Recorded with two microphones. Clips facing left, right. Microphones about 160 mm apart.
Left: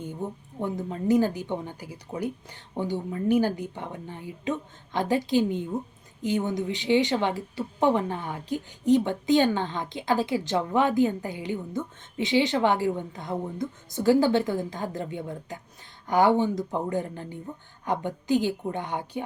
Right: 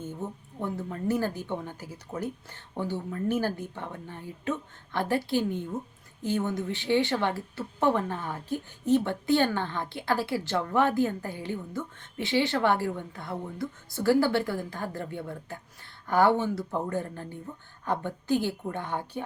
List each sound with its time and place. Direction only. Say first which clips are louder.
0.0 s a woman's voice: left 2 dB; 15° left (ahead or behind)